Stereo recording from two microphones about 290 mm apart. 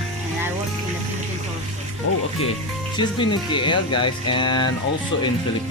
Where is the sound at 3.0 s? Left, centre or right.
Centre.